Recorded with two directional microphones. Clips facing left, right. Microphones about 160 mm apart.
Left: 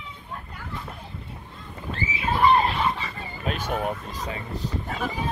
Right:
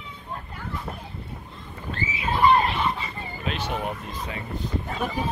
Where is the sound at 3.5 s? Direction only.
45° left (ahead or behind).